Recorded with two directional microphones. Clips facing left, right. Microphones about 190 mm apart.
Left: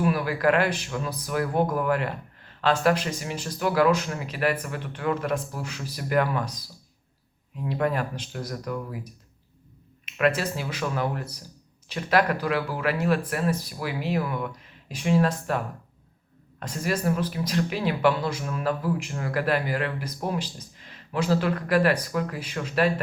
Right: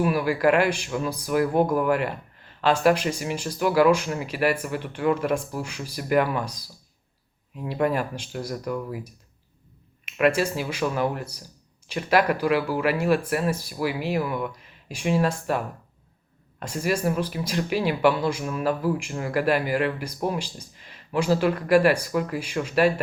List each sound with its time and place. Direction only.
0.0 s speech: 10° right (ahead or behind)
7.7 s speech: 10° right (ahead or behind)
10.2 s speech: 10° right (ahead or behind)